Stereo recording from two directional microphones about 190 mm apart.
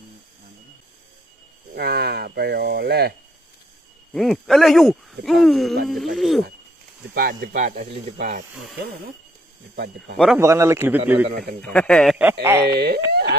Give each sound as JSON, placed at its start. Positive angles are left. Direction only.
{"t": 1.8, "sound": "speech", "side_deg": -60}
{"t": 4.1, "sound": "a man's voice", "side_deg": 0}
{"t": 7.2, "sound": "speech", "side_deg": -50}
{"t": 10.1, "sound": "a man's voice", "side_deg": 0}
{"t": 10.4, "sound": "a man's voice", "side_deg": -15}
{"t": 11.6, "sound": "a man's voice", "side_deg": 5}
{"t": 12.4, "sound": "a man's voice", "side_deg": -15}
{"t": 12.6, "sound": "speech", "side_deg": -60}
{"t": 13.1, "sound": "a sound", "side_deg": -60}